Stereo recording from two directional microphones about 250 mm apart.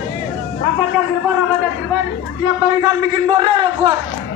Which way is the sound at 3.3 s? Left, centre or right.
Right.